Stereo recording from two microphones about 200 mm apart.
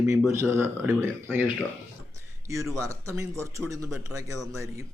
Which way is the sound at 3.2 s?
15° right (ahead or behind).